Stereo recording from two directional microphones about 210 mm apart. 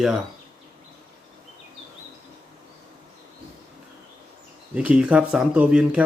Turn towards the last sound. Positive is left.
turn(degrees=-5)  # may be behind; listen again after turning